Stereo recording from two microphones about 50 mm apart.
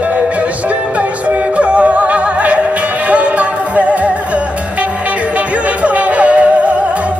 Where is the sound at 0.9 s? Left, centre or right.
Right.